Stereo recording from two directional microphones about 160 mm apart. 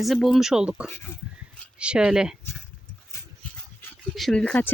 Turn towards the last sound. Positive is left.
turn(degrees=5)  # may be behind; listen again after turning